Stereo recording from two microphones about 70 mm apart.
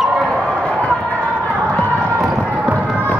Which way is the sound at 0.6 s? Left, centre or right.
Centre.